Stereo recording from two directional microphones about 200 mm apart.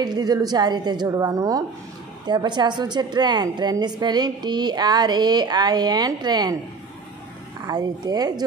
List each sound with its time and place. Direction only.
0.0 s a woman's voice: 20° right (ahead or behind)
7.6 s a woman's voice: 20° right (ahead or behind)